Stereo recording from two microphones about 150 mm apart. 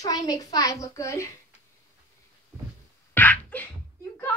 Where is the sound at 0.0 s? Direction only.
25° left (ahead or behind).